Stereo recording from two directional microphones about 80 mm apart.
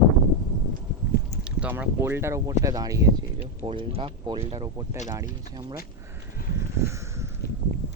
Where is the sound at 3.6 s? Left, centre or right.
Right.